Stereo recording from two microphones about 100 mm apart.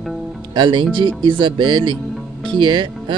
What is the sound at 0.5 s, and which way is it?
Speech, 50° right (ahead or behind).